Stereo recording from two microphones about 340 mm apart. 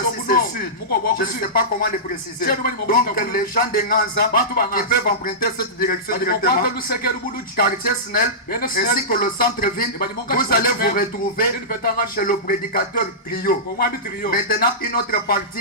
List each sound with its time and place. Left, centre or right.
0.9 s a man's voice: left
8.1 s a man's voice: left